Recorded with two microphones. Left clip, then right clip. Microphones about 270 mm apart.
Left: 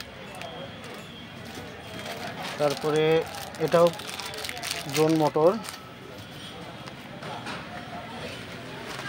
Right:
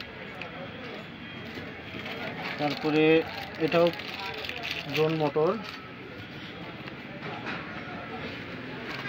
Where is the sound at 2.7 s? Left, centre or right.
Left.